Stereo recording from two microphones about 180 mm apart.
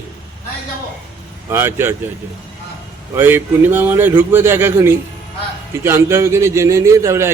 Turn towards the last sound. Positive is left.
turn(degrees=-15)  # may be behind; listen again after turning